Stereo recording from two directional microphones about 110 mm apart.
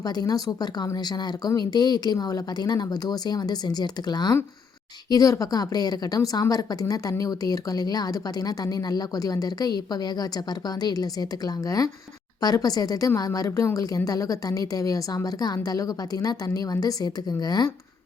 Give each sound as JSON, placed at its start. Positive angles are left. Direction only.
{"t": 0.0, "sound": "a woman's voice", "side_deg": 35}